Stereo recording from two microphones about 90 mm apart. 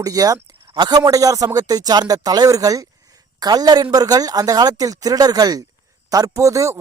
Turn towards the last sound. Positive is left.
turn(degrees=-35)  # may be behind; listen again after turning